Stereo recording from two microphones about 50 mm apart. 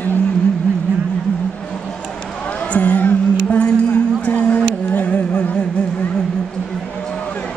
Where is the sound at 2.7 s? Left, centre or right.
Left.